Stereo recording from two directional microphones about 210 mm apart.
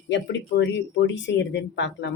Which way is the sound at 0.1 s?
55° left (ahead or behind).